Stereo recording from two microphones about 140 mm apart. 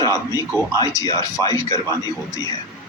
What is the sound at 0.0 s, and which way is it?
A man's voice, 25° left (ahead or behind).